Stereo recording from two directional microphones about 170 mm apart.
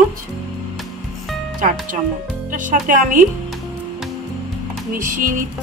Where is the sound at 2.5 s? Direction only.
50° right (ahead or behind).